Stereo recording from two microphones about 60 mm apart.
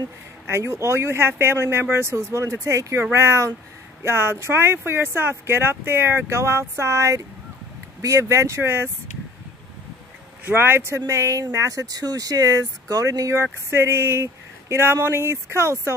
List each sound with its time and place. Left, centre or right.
0.5 s speech: right
10.4 s speech: right
11.1 s speech: right
13.4 s speech: right